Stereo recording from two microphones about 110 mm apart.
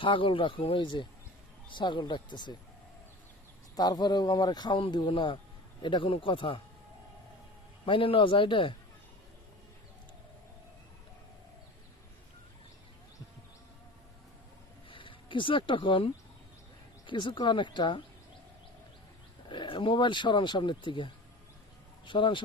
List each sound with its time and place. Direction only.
0.0 s speech: 50° left (ahead or behind)
3.8 s speech: 40° left (ahead or behind)
7.9 s speech: 55° left (ahead or behind)
14.8 s a sound: 50° left (ahead or behind)
17.1 s speech: 45° left (ahead or behind)
19.5 s speech: 50° left (ahead or behind)